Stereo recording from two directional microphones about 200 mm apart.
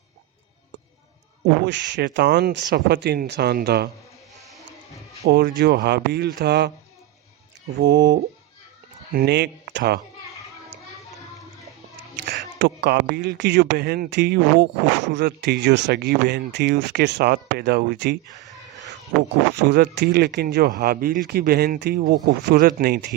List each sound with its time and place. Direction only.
1.6 s speech: 60° right (ahead or behind)
5.3 s speech: 55° right (ahead or behind)
7.8 s speech: 55° right (ahead or behind)
12.1 s speech: 60° right (ahead or behind)
18.3 s a sound: 15° left (ahead or behind)
19.6 s speech: 55° right (ahead or behind)